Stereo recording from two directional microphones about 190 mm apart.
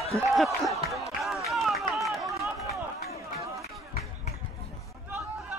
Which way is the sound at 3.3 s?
15° right (ahead or behind).